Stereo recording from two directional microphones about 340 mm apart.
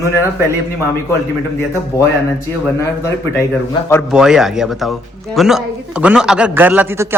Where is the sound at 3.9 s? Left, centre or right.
Centre.